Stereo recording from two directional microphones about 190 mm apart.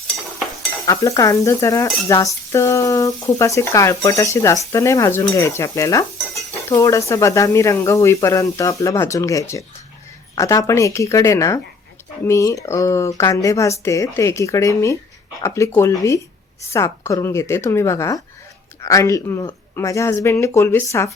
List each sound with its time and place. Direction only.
0.9 s cutlery: 15° left (ahead or behind)